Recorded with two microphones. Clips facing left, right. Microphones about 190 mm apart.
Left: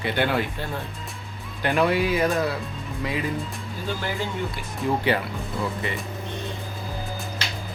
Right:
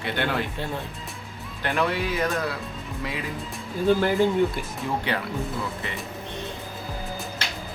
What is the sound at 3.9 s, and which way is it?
Speech, 55° right (ahead or behind).